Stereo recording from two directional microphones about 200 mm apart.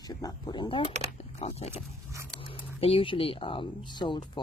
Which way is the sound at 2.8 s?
25° left (ahead or behind).